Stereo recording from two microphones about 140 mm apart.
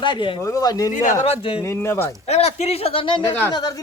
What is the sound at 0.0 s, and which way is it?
Speech, 35° left (ahead or behind).